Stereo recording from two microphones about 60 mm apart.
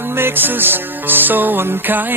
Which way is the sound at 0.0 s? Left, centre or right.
Right.